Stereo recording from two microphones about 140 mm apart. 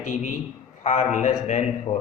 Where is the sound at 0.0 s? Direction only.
65° left (ahead or behind).